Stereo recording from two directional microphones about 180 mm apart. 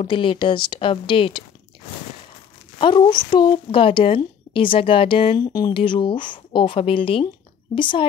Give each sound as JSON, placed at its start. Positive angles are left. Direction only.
{"t": 0.0, "sound": "a woman's voice", "side_deg": 30}
{"t": 2.8, "sound": "a woman's voice", "side_deg": 25}